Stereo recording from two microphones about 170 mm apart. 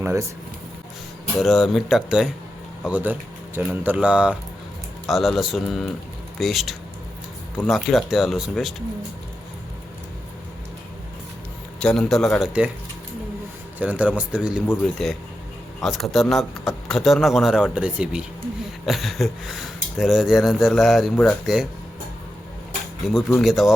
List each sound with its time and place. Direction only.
0.0 s speech: 15° right (ahead or behind)
1.4 s speech: centre (ahead or behind)
11.8 s speech: 5° left (ahead or behind)
13.7 s speech: 10° right (ahead or behind)
15.8 s speech: centre (ahead or behind)
23.0 s speech: centre (ahead or behind)